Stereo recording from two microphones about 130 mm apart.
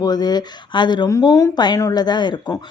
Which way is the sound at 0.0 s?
30° left (ahead or behind).